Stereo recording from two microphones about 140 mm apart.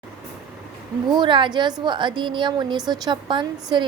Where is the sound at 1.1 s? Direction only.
35° right (ahead or behind).